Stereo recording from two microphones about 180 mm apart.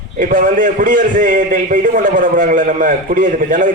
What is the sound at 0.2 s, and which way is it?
A man's voice, 50° right (ahead or behind).